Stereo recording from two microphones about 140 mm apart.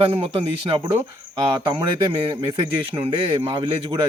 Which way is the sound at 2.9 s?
40° right (ahead or behind).